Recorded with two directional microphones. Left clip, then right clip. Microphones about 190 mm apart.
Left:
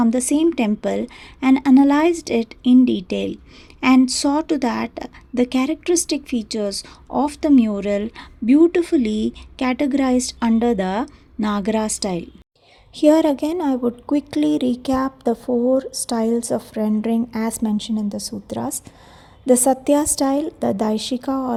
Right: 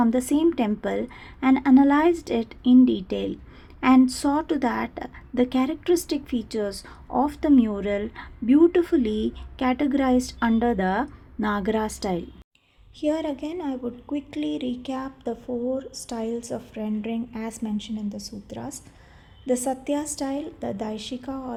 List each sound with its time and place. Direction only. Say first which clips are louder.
0.0 s a woman's voice: left 3 dB; 35° left (ahead or behind)
13.0 s a woman's voice: left 11 dB; 50° left (ahead or behind)